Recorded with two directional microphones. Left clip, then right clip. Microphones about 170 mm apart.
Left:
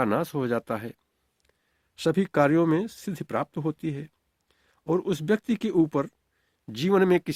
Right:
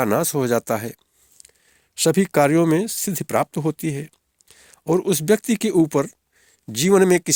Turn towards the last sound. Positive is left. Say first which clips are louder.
# right 6 dB
turn(degrees=-40)  # may be behind; listen again after turning